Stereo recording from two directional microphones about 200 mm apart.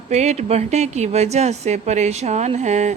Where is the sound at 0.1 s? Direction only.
35° right (ahead or behind).